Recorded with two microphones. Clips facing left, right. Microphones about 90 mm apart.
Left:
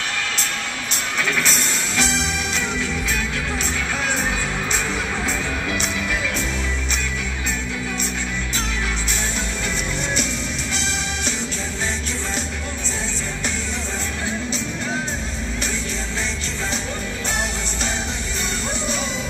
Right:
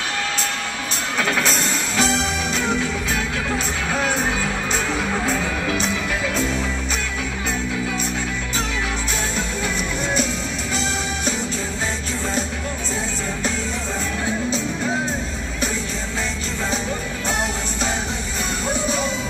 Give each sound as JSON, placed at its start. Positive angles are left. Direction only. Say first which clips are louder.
{"t": 1.4, "sound": "music", "louder": "right 2 dB", "side_deg": -40}